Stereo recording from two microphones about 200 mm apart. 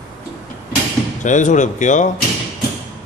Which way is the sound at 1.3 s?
40° left (ahead or behind).